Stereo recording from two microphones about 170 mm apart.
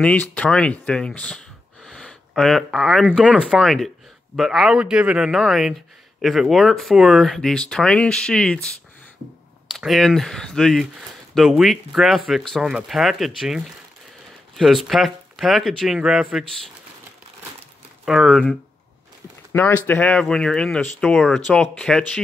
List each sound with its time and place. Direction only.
0.0 s speech: 10° left (ahead or behind)
9.7 s speech: centre (ahead or behind)
18.0 s speech: centre (ahead or behind)
19.9 s speech: 10° left (ahead or behind)